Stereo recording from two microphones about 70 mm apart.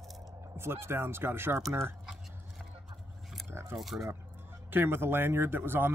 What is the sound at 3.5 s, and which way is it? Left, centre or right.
Speech, right.